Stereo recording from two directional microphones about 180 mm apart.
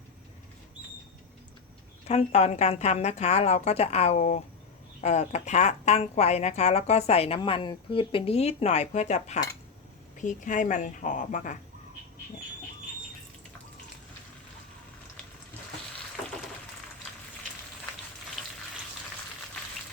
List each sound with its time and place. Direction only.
2.0 s a woman's voice: 35° left (ahead or behind)